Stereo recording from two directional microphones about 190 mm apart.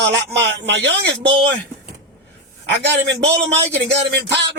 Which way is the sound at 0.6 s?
65° right (ahead or behind).